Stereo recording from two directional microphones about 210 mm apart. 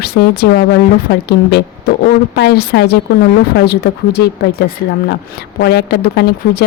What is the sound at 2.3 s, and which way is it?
Speech, 50° left (ahead or behind).